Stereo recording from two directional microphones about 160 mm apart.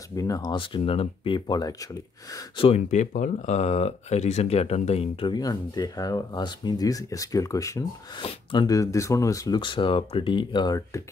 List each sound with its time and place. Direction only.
0.1 s speech: 20° left (ahead or behind)
2.9 s speech: 50° left (ahead or behind); by 7.8 s 20° left (ahead or behind)
8.2 s speech: 30° left (ahead or behind)